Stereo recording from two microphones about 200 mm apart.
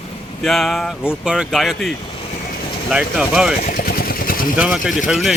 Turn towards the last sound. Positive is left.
turn(degrees=0)  # may be behind; listen again after turning